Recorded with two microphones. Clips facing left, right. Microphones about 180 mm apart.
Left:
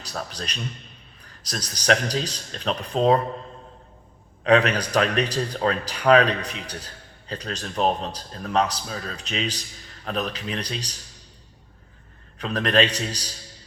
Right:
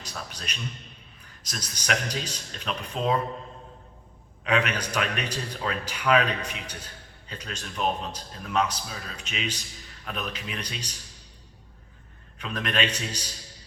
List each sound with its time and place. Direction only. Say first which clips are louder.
0.0 s a man's voice: left 6 dB; 35° left (ahead or behind)
4.4 s speech: left 7 dB; 35° left (ahead or behind)
12.4 s speech: left 7 dB; 35° left (ahead or behind)